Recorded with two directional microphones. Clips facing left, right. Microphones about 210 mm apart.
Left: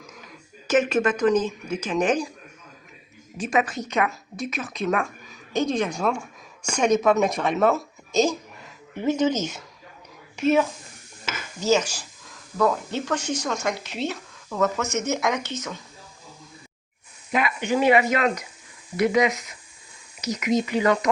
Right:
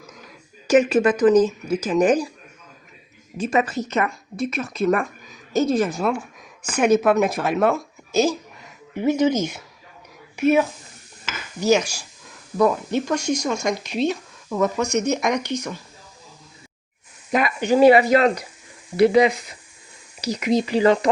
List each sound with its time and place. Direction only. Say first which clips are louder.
0.7 s speech: right 5 dB; 10° right (ahead or behind)
3.3 s speech: right 3 dB; centre (ahead or behind)
17.3 s speech: right 4 dB; 40° right (ahead or behind)